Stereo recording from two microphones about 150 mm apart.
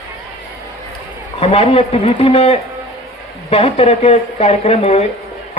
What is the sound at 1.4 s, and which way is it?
A man's voice, 40° left (ahead or behind).